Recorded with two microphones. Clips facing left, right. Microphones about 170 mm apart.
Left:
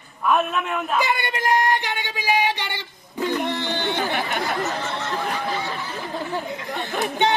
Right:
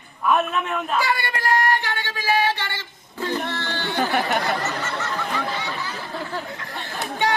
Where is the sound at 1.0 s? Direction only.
20° left (ahead or behind).